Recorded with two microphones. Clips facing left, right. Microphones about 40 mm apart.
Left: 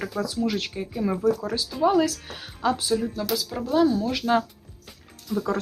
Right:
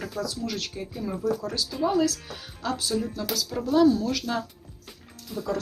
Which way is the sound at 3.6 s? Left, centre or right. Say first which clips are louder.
Right 1 dB; centre.